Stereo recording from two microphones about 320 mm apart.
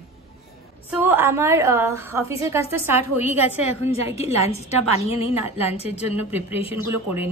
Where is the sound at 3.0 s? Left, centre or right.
Right.